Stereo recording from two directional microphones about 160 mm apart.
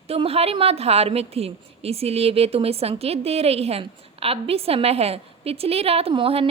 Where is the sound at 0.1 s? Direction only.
40° right (ahead or behind).